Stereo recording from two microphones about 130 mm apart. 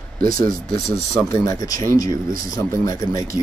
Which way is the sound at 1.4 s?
25° left (ahead or behind).